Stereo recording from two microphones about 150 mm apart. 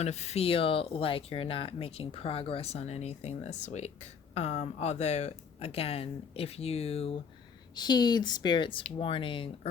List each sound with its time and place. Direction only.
0.0 s speech: 45° left (ahead or behind)
7.8 s speech: 30° left (ahead or behind)